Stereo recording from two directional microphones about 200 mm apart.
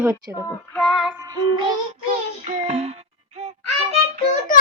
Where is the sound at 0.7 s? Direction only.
Centre (ahead or behind).